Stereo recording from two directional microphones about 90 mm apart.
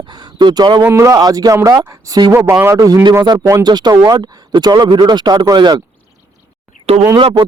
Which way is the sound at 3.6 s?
50° right (ahead or behind).